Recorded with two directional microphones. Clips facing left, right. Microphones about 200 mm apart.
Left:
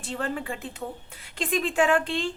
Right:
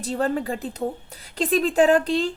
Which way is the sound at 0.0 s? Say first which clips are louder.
Right 7 dB; 40° right (ahead or behind).